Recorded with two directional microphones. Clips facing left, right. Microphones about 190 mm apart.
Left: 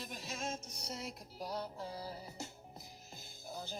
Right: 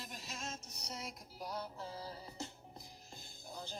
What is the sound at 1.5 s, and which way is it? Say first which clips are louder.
Music: left 2 dB; 20° left (ahead or behind).